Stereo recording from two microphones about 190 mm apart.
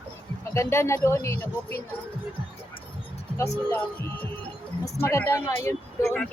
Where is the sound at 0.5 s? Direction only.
15° left (ahead or behind).